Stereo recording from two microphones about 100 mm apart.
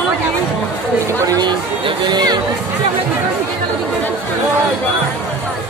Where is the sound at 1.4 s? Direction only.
50° right (ahead or behind).